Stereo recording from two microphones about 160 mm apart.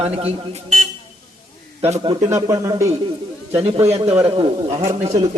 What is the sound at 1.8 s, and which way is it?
Speech, 40° right (ahead or behind).